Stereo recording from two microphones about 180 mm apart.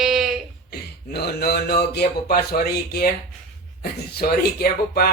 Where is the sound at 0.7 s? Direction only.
60° left (ahead or behind).